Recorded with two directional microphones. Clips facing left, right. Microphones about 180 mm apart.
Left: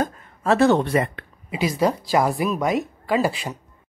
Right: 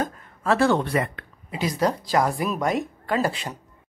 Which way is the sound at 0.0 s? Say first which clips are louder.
Left 3 dB; 25° left (ahead or behind).